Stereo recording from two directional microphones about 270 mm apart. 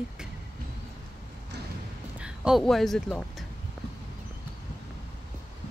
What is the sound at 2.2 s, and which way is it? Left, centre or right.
Speech, centre.